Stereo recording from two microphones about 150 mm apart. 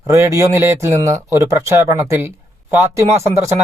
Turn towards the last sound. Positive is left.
turn(degrees=-20)  # may be behind; listen again after turning